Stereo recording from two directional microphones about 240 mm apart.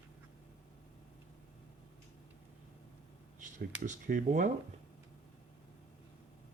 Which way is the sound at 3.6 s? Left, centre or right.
Right.